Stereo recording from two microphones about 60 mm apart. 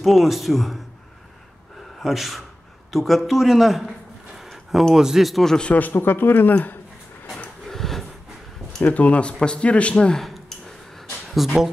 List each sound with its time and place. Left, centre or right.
0.0 s a man's voice: centre
2.0 s a man's voice: centre
5.6 s a man's voice: left
7.6 s a sound: centre
8.8 s speech: left
10.1 s speech: centre